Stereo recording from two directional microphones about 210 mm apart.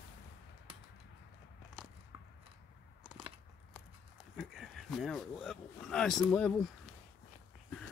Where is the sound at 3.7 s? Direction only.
Centre (ahead or behind).